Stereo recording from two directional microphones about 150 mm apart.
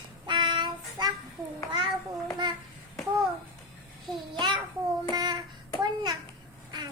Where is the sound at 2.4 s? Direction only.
30° right (ahead or behind).